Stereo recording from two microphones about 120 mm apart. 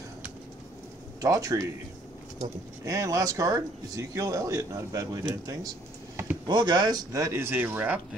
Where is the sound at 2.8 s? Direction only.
30° right (ahead or behind).